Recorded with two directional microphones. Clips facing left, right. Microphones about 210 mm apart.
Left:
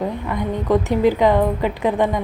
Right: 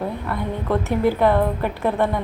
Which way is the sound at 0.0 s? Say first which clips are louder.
Left 3 dB; 15° left (ahead or behind).